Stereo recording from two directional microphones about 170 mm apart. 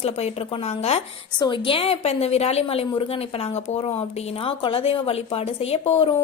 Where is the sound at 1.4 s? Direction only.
25° left (ahead or behind).